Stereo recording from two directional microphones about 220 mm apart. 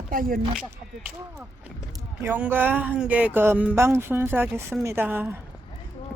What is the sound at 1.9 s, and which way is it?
Speech, 10° right (ahead or behind).